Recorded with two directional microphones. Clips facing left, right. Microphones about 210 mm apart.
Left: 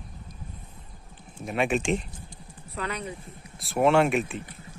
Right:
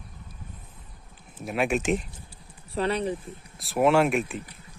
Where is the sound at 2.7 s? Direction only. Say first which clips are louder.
Right 7 dB; 30° right (ahead or behind).